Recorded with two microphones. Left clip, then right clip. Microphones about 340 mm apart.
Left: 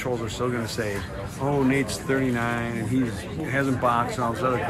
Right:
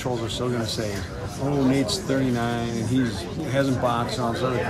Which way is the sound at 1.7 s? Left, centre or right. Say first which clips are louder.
Right 1 dB; centre.